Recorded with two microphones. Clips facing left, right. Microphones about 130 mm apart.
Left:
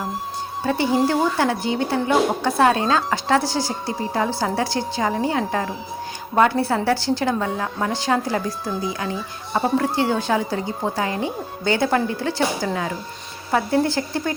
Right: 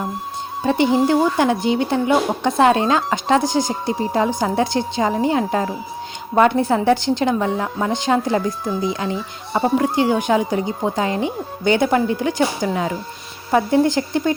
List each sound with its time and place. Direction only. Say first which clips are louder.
0.6 s a woman's voice: right 3 dB; 20° right (ahead or behind)